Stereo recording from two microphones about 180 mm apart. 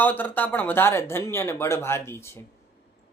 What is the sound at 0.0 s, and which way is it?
Speech, 10° left (ahead or behind).